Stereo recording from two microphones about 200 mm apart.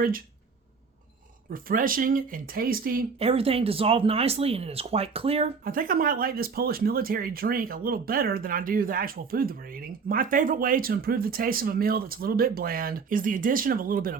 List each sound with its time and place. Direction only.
1.5 s speech: 45° right (ahead or behind)
3.2 s speech: 30° right (ahead or behind)
5.6 s speech: 45° right (ahead or behind)